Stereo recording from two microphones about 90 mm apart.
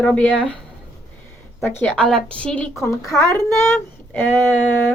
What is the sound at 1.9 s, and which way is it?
Speech, 10° left (ahead or behind).